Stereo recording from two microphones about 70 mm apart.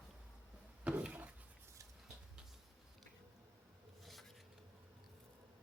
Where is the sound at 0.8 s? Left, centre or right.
Centre.